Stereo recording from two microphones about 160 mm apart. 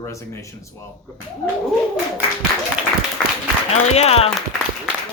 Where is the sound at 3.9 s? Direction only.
40° left (ahead or behind).